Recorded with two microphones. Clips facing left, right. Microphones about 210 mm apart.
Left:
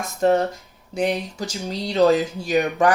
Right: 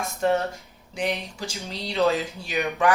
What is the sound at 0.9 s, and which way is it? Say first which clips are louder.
Speech: left 5 dB; 45° left (ahead or behind).